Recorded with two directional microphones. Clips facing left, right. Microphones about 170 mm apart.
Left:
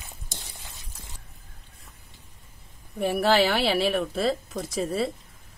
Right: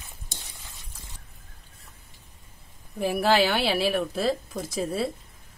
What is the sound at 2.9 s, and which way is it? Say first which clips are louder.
Speech: left 1 dB; centre (ahead or behind).